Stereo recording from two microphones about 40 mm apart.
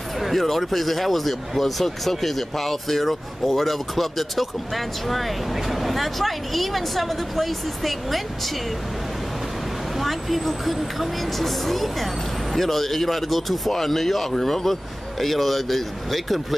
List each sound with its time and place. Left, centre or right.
0.2 s speech: centre
9.9 s speech: centre